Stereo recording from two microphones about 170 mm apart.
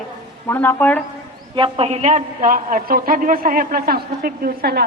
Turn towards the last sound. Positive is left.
turn(degrees=-65)  # may be behind; listen again after turning